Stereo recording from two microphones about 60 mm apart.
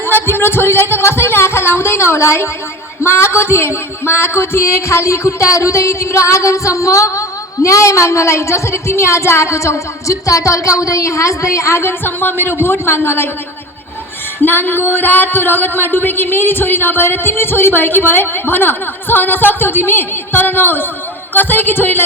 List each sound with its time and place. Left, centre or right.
0.0 s a sound: left
3.0 s speech: left
14.4 s speech: left